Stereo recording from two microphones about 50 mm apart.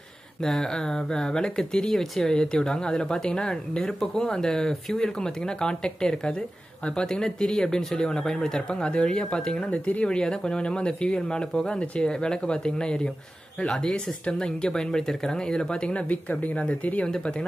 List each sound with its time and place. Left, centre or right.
0.4 s speech: centre
2.3 s speech: centre
9.7 s speech: left
10.1 s speech: centre
16.1 s speech: left